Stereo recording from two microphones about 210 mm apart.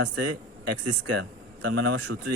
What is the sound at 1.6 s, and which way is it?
Speech, 90° right.